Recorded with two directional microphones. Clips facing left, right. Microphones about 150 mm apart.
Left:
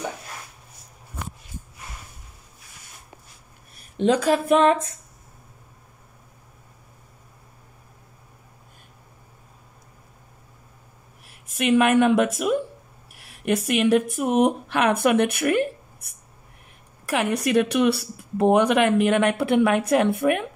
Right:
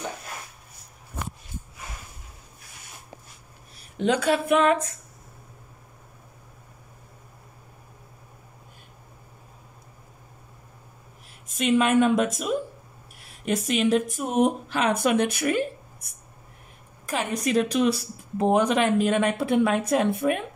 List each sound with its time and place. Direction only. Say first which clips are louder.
3.9 s a woman's voice: left 3 dB; 35° left (ahead or behind)
11.4 s speech: left 3 dB; 65° left (ahead or behind)
17.1 s a woman's voice: left 3 dB; 65° left (ahead or behind)